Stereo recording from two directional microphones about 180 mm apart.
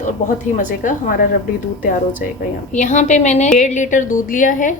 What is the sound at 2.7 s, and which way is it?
A woman's voice, 45° left (ahead or behind).